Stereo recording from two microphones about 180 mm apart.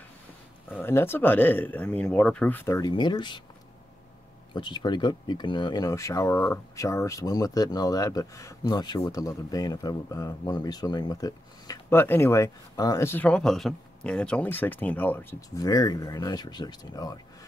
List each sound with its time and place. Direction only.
0.7 s speech: 10° left (ahead or behind)
4.6 s speech: 25° left (ahead or behind)